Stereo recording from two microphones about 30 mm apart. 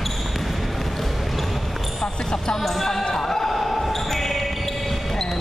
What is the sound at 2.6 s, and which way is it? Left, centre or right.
Speech, centre.